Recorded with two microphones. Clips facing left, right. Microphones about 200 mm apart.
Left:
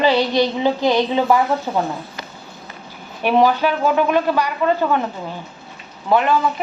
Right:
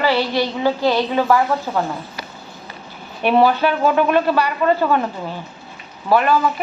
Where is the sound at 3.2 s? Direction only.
10° left (ahead or behind).